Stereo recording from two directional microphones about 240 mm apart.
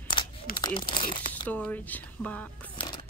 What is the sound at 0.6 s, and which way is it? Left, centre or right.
Speech, centre.